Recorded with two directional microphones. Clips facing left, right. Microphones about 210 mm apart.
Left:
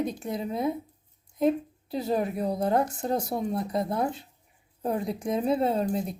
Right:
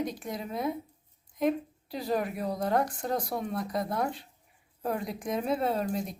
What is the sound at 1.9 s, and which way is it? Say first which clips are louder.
Speech: left 3 dB; 25° left (ahead or behind).